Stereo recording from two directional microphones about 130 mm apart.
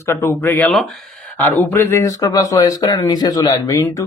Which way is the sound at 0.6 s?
Centre (ahead or behind).